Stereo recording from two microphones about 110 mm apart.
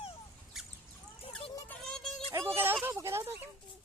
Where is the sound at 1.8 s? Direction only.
5° left (ahead or behind).